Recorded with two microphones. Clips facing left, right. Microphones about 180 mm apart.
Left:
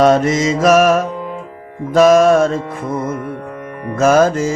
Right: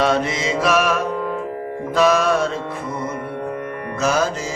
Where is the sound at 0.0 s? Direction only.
45° left (ahead or behind).